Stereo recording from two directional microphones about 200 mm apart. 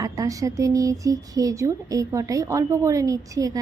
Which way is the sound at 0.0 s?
15° right (ahead or behind).